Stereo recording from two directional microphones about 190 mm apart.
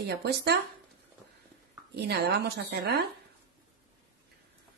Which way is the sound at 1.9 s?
60° right (ahead or behind).